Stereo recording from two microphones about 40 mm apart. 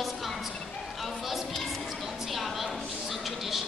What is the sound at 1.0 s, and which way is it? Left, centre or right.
Music, centre.